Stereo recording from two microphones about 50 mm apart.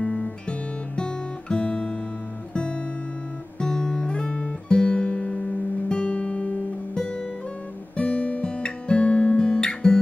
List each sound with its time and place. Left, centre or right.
0.0 s guitar: centre
2.5 s music: centre
3.6 s guitar: centre
7.9 s guitar: left